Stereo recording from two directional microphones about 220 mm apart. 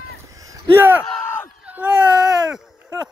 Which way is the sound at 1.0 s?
10° left (ahead or behind).